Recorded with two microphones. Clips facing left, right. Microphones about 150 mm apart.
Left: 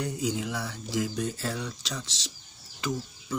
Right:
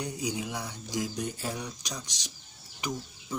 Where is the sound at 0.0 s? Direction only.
15° right (ahead or behind).